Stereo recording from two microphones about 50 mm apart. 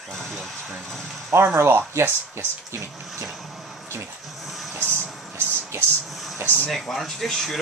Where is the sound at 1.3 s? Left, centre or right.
Right.